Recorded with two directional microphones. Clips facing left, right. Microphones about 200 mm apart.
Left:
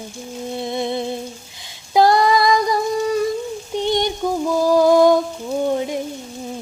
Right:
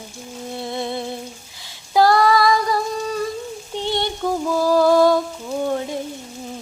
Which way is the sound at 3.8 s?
15° left (ahead or behind).